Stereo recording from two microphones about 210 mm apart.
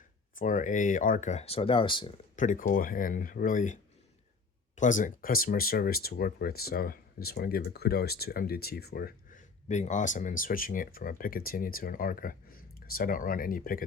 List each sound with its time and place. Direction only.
0.3 s speech: 40° left (ahead or behind)
2.3 s speech: 35° left (ahead or behind)